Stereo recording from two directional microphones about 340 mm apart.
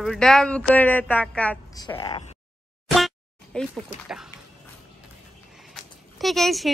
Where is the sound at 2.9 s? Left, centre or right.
Centre.